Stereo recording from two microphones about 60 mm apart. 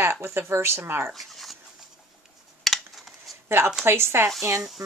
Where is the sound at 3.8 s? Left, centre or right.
Right.